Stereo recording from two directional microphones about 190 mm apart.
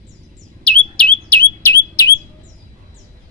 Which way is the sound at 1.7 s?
15° left (ahead or behind).